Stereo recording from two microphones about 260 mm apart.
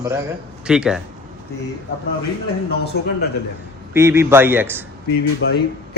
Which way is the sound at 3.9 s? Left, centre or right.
Centre.